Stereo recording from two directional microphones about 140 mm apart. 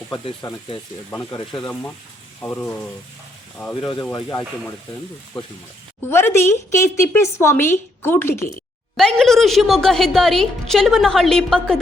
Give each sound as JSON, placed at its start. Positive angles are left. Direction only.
{"t": 0.4, "sound": "speech", "side_deg": 25}
{"t": 2.4, "sound": "a woman's voice", "side_deg": 10}
{"t": 4.1, "sound": "speech", "side_deg": 25}
{"t": 6.1, "sound": "a woman's voice", "side_deg": 15}
{"t": 9.0, "sound": "a woman's voice", "side_deg": 5}